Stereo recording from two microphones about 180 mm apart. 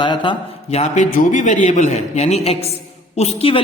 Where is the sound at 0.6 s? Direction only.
40° left (ahead or behind).